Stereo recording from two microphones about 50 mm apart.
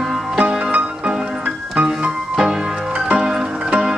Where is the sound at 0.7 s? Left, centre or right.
Right.